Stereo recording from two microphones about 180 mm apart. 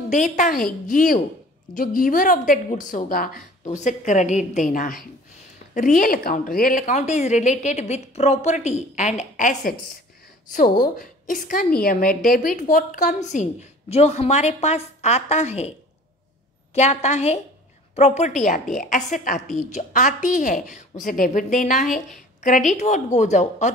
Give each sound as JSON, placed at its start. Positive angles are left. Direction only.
{"t": 0.1, "sound": "a woman's voice", "side_deg": 45}
{"t": 3.7, "sound": "a woman's voice", "side_deg": 40}
{"t": 16.7, "sound": "a woman's voice", "side_deg": 40}